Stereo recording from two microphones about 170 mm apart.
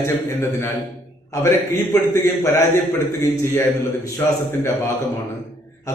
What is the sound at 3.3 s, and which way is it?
Speech, 20° left (ahead or behind).